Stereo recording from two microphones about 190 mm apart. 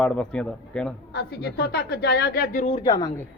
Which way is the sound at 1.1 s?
60° left (ahead or behind).